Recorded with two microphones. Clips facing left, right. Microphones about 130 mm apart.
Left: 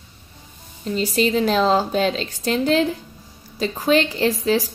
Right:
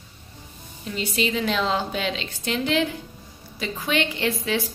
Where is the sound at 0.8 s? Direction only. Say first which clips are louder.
Left 6 dB; 40° left (ahead or behind).